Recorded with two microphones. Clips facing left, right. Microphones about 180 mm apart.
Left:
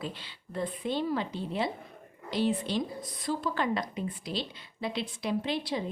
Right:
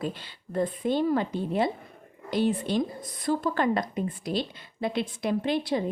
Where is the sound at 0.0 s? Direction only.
50° right (ahead or behind).